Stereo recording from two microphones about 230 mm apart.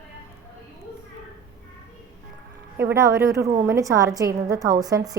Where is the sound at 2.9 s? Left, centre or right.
Centre.